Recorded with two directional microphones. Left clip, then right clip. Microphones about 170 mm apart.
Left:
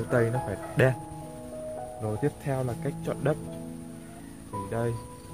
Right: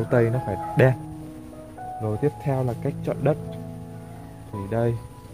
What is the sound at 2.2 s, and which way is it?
Speech, 15° right (ahead or behind).